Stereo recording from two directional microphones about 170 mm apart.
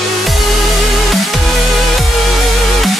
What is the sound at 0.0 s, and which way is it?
Music, centre (ahead or behind).